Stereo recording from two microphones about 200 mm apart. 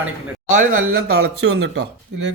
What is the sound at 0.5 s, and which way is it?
Speech, 40° right (ahead or behind).